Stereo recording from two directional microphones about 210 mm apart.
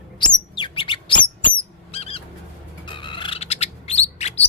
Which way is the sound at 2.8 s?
25° left (ahead or behind).